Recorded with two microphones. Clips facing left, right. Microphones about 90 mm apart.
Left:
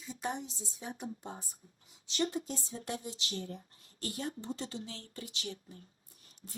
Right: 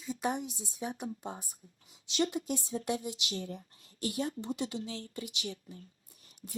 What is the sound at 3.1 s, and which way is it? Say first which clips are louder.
Speech: right 2 dB; 15° right (ahead or behind).